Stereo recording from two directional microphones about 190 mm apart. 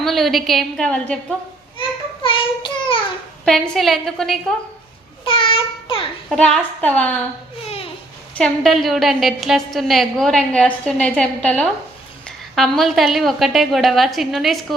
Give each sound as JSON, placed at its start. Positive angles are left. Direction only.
{"t": 0.0, "sound": "a woman's voice", "side_deg": 0}
{"t": 2.2, "sound": "a sound", "side_deg": 25}
{"t": 3.4, "sound": "a woman's voice", "side_deg": 0}
{"t": 5.2, "sound": "child singing", "side_deg": 30}
{"t": 6.2, "sound": "a woman's voice", "side_deg": 5}
{"t": 8.4, "sound": "a woman's voice", "side_deg": 0}